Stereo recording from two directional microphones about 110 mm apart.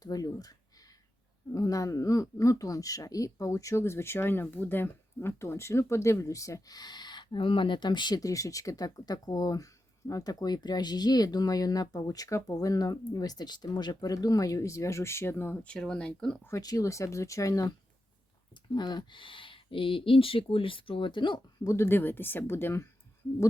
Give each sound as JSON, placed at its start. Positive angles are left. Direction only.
{"t": 0.0, "sound": "a sound", "side_deg": 35}
{"t": 1.5, "sound": "speech", "side_deg": 30}
{"t": 15.6, "sound": "speech", "side_deg": 10}
{"t": 16.6, "sound": "speech", "side_deg": 35}
{"t": 21.7, "sound": "speech", "side_deg": 20}